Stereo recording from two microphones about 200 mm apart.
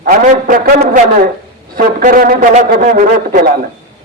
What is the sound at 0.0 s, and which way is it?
A man's voice, 45° right (ahead or behind).